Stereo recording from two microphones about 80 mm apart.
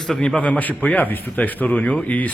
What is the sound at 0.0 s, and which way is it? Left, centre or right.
A man's voice, centre.